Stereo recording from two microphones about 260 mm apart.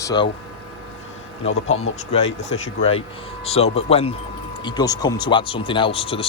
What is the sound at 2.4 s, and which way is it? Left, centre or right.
Speech, left.